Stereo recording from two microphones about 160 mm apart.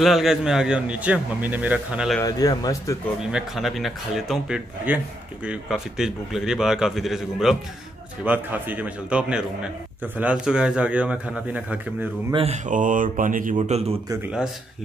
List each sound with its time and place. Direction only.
0.0 s speech: centre (ahead or behind)
2.2 s speech: 25° left (ahead or behind)
3.3 s speech: 5° right (ahead or behind)
12.3 s speech: 35° right (ahead or behind)
12.6 s speech: 55° right (ahead or behind)
13.6 s speech: 40° right (ahead or behind)